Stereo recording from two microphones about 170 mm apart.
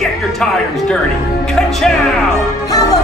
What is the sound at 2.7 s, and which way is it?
Music, 20° left (ahead or behind).